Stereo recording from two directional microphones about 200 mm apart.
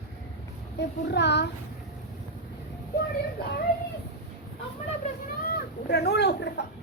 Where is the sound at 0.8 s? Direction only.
60° left (ahead or behind).